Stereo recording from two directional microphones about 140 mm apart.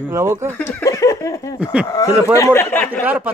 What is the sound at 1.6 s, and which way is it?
Speech, 10° right (ahead or behind).